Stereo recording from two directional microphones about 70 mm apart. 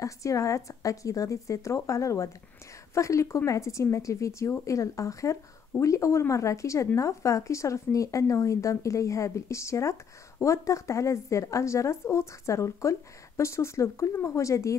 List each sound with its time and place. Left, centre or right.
0.0 s speech: left